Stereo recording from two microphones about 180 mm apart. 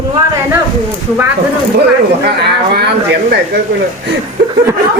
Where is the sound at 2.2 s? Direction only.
60° right (ahead or behind).